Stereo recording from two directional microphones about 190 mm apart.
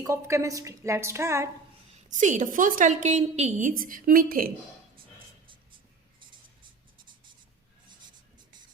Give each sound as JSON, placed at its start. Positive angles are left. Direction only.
{"t": 0.0, "sound": "a woman's voice", "side_deg": -15}
{"t": 2.0, "sound": "a woman's voice", "side_deg": -40}